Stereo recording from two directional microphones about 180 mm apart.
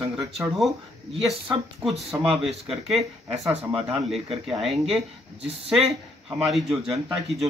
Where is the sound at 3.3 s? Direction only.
35° right (ahead or behind).